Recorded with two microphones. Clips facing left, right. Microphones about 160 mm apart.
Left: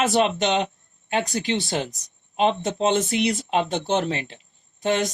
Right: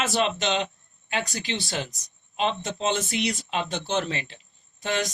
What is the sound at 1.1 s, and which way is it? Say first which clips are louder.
Speech: left 6 dB; 20° left (ahead or behind).